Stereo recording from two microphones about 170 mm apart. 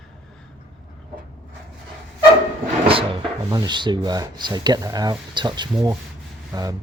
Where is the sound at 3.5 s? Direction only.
25° right (ahead or behind).